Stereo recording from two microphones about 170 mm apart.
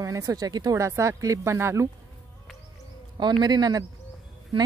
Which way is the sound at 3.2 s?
25° right (ahead or behind).